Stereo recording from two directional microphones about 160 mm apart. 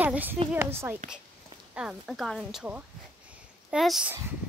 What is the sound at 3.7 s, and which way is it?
Speech, centre (ahead or behind).